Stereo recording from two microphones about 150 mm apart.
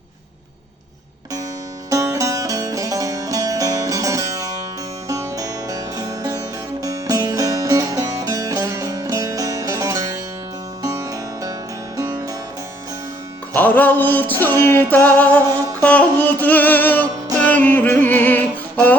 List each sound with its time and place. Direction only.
1.9 s music: 20° right (ahead or behind)
13.6 s music: 10° left (ahead or behind)